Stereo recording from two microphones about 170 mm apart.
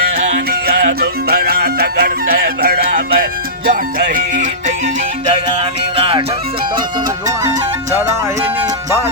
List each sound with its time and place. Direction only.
0.7 s music: 65° right (ahead or behind)
6.0 s music: 30° right (ahead or behind)